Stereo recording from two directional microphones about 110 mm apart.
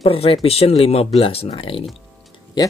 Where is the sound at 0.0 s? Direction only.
60° left (ahead or behind).